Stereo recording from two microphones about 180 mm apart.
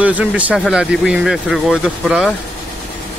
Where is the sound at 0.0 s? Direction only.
5° right (ahead or behind).